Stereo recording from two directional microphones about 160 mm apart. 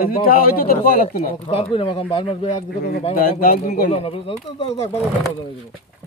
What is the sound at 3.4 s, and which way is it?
Speech, 60° left (ahead or behind).